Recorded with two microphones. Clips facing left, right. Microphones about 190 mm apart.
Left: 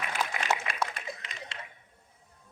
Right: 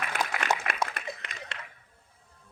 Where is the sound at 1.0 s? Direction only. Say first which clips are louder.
Right 2 dB; 60° right (ahead or behind).